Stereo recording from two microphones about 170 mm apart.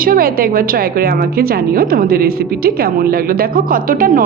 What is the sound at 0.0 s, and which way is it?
A woman's voice, 60° right (ahead or behind).